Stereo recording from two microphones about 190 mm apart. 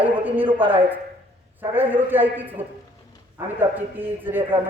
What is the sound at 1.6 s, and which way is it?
A man's voice, 10° right (ahead or behind).